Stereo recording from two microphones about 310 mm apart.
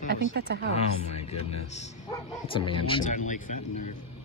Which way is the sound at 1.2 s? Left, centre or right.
Centre.